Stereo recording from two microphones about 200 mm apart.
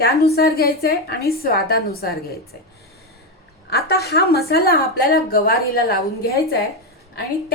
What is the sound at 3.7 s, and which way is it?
A woman's voice, 50° left (ahead or behind).